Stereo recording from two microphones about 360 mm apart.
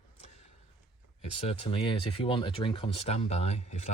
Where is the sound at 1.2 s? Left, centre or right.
Centre.